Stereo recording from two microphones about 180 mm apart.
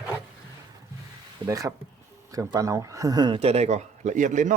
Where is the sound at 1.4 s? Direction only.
20° right (ahead or behind).